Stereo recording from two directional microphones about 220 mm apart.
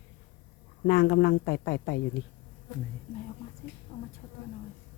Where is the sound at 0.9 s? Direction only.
50° left (ahead or behind).